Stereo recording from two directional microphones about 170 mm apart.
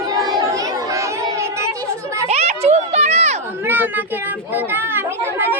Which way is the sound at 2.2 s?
40° right (ahead or behind).